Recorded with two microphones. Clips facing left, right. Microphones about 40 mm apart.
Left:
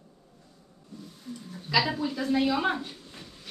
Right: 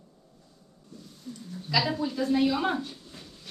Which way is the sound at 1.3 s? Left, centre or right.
Centre.